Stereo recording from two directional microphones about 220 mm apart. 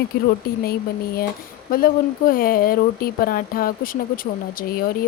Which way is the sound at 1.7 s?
40° left (ahead or behind).